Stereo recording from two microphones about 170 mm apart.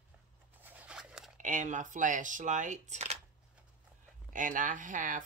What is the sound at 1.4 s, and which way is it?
Speech, 45° right (ahead or behind).